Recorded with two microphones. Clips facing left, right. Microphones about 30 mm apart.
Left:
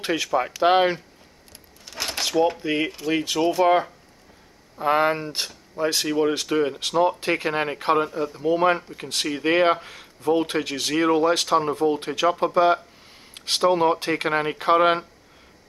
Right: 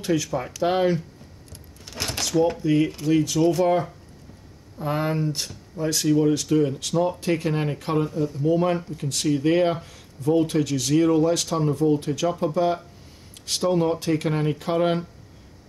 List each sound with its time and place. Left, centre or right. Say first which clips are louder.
0.0 s speech: left 1 dB; left
2.0 s a sound: even; centre
2.6 s speech: right 3 dB; left
4.7 s speech: left 5 dB; left